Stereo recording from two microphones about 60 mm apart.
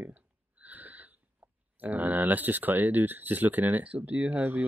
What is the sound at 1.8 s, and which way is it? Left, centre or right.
Speech, right.